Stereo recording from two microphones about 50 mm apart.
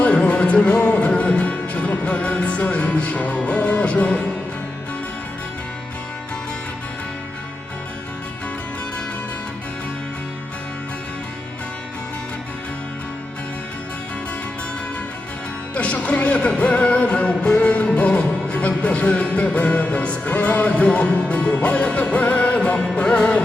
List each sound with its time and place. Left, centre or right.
0.0 s music: left
15.7 s music: left